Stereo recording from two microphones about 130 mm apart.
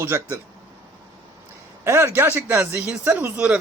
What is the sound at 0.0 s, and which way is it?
Speech, 20° right (ahead or behind).